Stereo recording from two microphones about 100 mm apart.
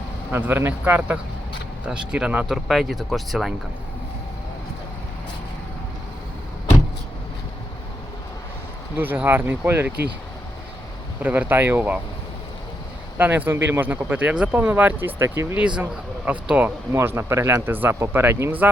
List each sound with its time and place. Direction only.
0.3 s speech: 20° right (ahead or behind); by 3.5 s centre (ahead or behind)
9.0 s speech: 20° right (ahead or behind)
11.2 s speech: 15° right (ahead or behind)
13.1 s speech: 20° right (ahead or behind)
15.6 s speech: 15° right (ahead or behind)
16.9 s speech: 25° right (ahead or behind)